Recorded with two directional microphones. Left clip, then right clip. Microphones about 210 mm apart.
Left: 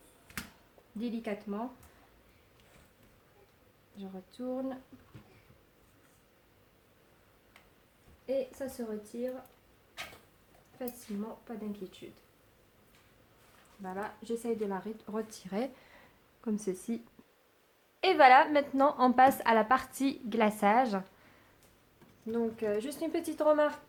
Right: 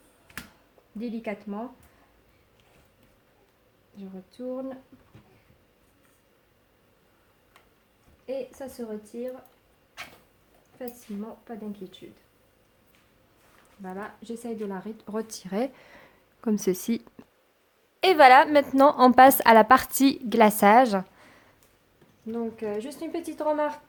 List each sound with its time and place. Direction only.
0.9 s a woman's voice: 25° right (ahead or behind)
4.3 s a woman's voice: 20° right (ahead or behind)
10.8 s a woman's voice: 25° right (ahead or behind)
13.8 s speech: 25° right (ahead or behind); by 17.0 s 40° right (ahead or behind)
18.0 s a woman's voice: 45° right (ahead or behind)
22.3 s a woman's voice: 10° right (ahead or behind)